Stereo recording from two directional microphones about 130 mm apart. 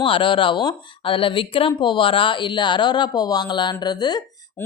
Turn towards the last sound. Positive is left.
turn(degrees=30)  # may be behind; listen again after turning